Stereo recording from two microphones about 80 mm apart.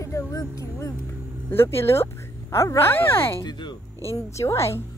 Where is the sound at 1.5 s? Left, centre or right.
Left.